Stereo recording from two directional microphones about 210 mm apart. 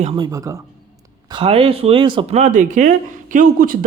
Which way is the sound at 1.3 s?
25° right (ahead or behind).